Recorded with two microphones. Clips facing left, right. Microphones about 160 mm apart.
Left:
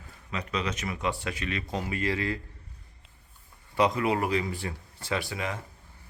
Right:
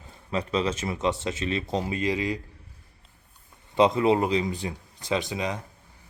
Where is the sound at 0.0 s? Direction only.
30° right (ahead or behind).